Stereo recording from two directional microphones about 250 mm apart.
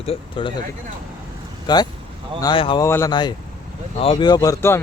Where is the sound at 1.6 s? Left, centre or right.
Centre.